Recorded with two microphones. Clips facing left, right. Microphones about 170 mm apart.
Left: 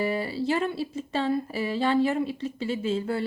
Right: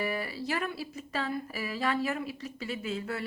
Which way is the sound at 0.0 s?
25° left (ahead or behind).